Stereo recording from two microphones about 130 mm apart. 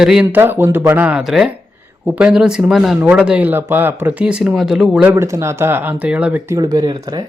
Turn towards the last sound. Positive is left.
turn(degrees=-30)  # may be behind; listen again after turning